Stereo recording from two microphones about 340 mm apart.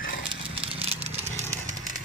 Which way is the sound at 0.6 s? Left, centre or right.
Centre.